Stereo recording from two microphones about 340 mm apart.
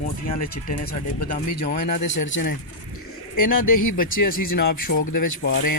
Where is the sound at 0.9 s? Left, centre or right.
Left.